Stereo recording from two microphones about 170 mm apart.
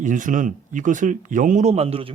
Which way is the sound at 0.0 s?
50° right (ahead or behind).